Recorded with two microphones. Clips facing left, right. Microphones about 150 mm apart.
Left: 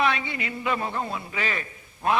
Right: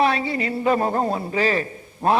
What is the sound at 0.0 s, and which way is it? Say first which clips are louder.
A man's voice: right 5 dB; 35° right (ahead or behind).